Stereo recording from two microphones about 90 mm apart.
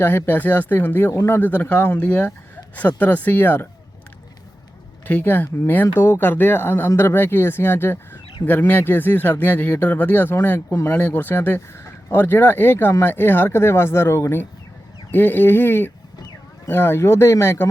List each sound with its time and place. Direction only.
0.0 s speech: 25° left (ahead or behind)
5.0 s speech: 20° left (ahead or behind)